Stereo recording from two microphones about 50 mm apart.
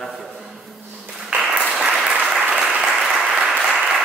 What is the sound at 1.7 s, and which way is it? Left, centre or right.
Applause, centre.